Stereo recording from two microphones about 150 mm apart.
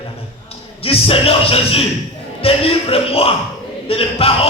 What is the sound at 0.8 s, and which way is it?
A man's voice, 40° left (ahead or behind).